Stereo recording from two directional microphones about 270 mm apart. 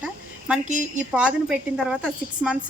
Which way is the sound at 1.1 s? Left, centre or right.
Centre.